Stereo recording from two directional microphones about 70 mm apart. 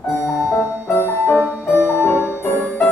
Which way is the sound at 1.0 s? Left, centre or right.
Left.